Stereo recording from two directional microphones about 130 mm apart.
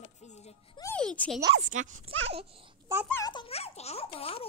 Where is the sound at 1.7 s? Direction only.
75° right (ahead or behind).